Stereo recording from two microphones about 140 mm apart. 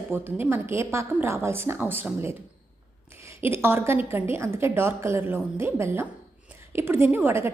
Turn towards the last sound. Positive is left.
turn(degrees=-20)  # may be behind; listen again after turning